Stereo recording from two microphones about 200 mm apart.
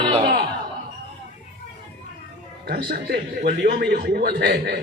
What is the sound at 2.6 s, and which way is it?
A man's voice, 50° right (ahead or behind).